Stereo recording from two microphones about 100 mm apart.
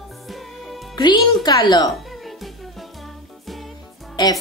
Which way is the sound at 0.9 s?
45° left (ahead or behind).